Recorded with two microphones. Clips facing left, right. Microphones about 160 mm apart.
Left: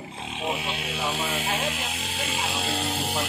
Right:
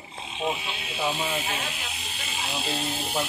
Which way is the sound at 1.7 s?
90° left.